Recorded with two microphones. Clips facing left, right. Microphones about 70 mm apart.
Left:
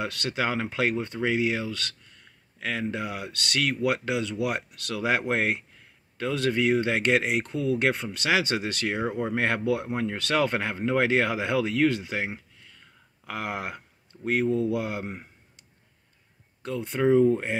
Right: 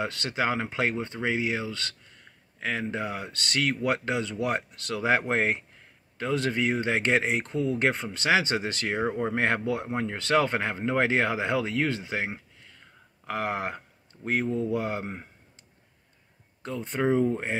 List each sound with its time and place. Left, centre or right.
0.0 s speech: right
16.6 s speech: right